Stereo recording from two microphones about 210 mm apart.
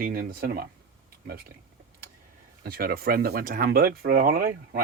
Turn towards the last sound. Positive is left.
turn(degrees=-45)  # may be behind; listen again after turning